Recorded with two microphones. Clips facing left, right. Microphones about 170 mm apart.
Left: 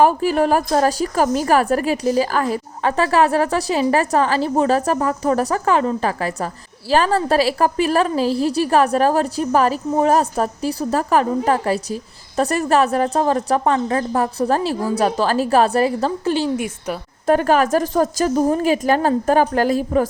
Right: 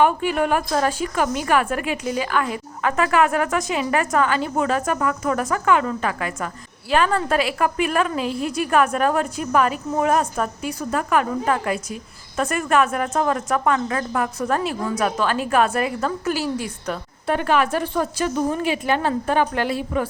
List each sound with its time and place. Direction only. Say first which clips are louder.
0.0 s speech: left 4 dB; 35° left (ahead or behind)
17.2 s speech: left 5 dB; 40° left (ahead or behind)